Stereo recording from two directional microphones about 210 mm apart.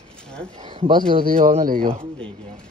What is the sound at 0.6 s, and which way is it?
Speech, 20° right (ahead or behind).